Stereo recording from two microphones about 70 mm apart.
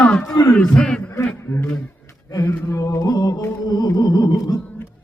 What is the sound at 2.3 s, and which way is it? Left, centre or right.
Mantra, left.